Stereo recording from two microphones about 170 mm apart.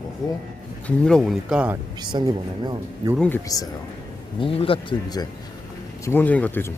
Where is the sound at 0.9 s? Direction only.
5° left (ahead or behind).